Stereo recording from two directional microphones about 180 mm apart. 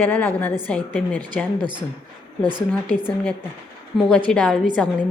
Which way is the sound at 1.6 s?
25° right (ahead or behind).